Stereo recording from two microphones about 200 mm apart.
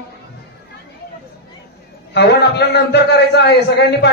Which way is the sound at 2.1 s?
55° left (ahead or behind).